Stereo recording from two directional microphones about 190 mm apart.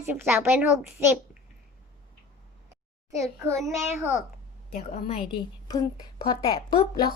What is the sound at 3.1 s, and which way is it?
Child singing, 15° right (ahead or behind).